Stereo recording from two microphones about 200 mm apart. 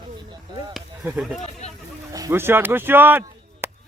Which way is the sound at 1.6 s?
35° left (ahead or behind).